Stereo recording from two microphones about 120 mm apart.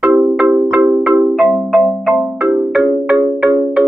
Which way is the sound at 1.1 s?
15° right (ahead or behind).